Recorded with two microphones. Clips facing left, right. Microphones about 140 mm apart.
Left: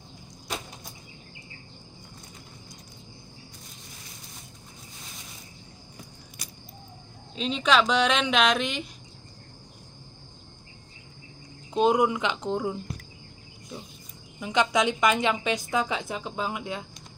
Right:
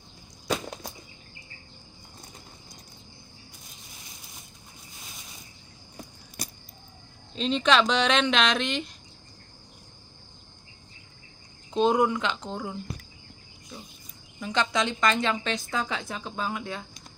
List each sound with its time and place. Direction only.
6.4 s a sound: 40° right (ahead or behind)
7.3 s speech: 5° left (ahead or behind)
11.7 s a woman's voice: 10° left (ahead or behind)
14.4 s a woman's voice: 15° left (ahead or behind)